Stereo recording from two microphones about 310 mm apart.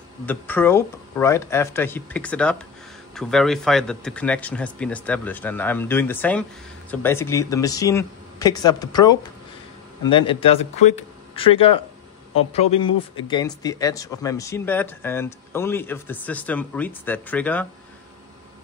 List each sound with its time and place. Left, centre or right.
0.3 s speech: centre